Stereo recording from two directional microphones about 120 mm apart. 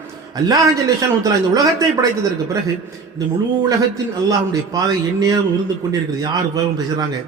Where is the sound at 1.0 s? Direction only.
30° right (ahead or behind).